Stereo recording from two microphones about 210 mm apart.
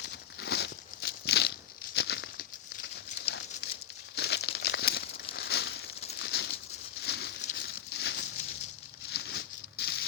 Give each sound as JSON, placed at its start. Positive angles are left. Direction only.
{"t": 0.0, "sound": "crumpling", "side_deg": 55}
{"t": 4.1, "sound": "crumpling", "side_deg": 50}
{"t": 6.1, "sound": "a sound", "side_deg": 55}